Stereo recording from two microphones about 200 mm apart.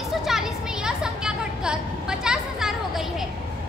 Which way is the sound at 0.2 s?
Centre (ahead or behind).